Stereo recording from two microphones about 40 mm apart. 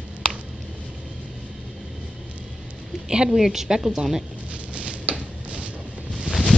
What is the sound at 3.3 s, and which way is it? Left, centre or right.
Speech, centre.